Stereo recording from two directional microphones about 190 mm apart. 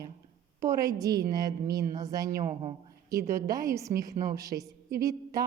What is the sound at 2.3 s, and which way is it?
Speech, 40° right (ahead or behind).